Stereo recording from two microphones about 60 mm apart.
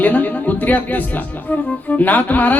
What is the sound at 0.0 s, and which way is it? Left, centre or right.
Speech, left.